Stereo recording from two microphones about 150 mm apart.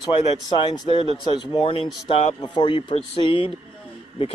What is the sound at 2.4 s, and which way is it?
Speech, 30° left (ahead or behind).